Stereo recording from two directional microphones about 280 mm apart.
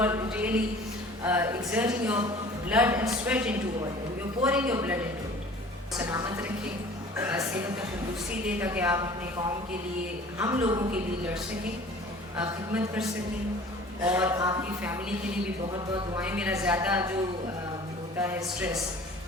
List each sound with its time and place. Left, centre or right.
0.0 s a man's voice: centre
10.3 s a man's voice: centre
18.2 s speech: centre